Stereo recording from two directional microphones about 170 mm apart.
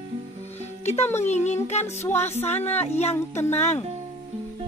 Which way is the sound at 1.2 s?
40° left (ahead or behind).